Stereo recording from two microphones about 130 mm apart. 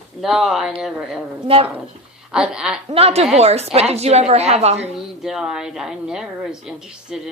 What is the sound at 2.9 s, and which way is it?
A woman's voice, 50° right (ahead or behind).